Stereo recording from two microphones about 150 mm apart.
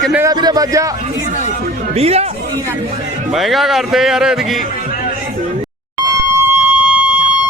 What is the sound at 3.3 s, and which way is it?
Speech, centre (ahead or behind).